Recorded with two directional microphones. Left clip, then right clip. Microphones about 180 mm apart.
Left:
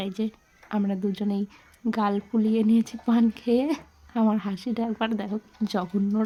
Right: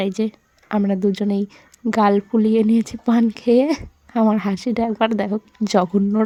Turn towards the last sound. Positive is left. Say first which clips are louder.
# right 10 dB
turn(degrees=-35)  # may be behind; listen again after turning